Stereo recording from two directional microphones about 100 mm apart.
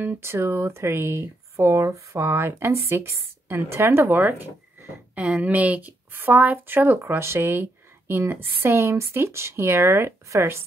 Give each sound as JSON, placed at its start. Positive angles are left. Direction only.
{"t": 0.0, "sound": "speech", "side_deg": -25}